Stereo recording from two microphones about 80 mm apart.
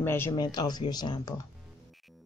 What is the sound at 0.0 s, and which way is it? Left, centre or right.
Speech, left.